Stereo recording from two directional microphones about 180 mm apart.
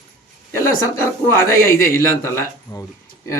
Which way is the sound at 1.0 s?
15° left (ahead or behind).